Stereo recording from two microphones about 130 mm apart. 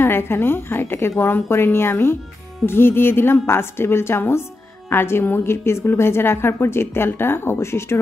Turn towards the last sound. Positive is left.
turn(degrees=20)  # may be behind; listen again after turning